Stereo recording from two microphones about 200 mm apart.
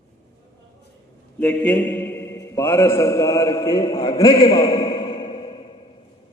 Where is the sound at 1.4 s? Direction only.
5° left (ahead or behind).